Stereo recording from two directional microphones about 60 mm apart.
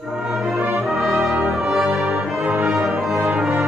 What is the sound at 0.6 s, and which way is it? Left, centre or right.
Brass instrument, right.